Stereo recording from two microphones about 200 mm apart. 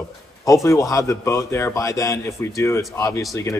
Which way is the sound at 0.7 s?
15° left (ahead or behind).